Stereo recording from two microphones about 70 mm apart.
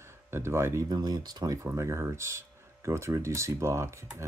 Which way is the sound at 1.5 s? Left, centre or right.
Right.